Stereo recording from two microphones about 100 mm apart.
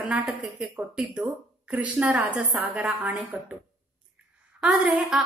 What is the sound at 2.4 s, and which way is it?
A woman's voice, centre (ahead or behind).